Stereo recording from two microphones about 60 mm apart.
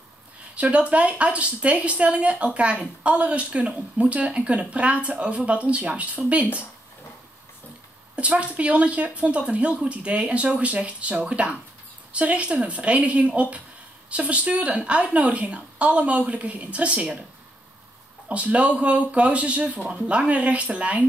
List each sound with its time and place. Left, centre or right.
0.6 s speech: right
8.2 s speech: right
18.3 s speech: right